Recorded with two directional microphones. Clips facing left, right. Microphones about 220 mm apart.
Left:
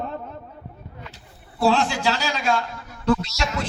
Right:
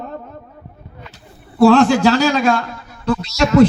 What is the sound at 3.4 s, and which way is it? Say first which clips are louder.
Speech: right 12 dB; 60° right (ahead or behind).